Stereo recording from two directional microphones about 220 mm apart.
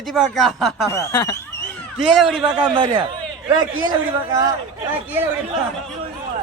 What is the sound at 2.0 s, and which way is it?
Speech, centre (ahead or behind).